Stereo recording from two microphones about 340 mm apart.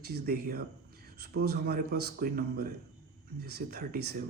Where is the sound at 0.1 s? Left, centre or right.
Right.